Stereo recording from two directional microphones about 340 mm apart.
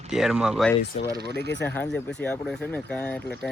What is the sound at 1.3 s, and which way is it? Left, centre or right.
Speech, left.